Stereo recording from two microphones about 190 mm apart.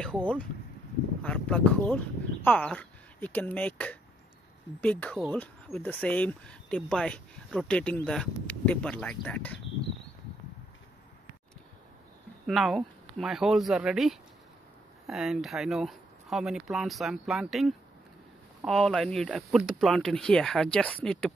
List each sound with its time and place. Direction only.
0.0 s speech: 5° left (ahead or behind)
12.4 s speech: centre (ahead or behind)